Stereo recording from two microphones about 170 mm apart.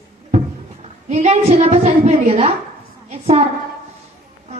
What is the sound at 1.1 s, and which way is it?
A woman's voice, 40° right (ahead or behind).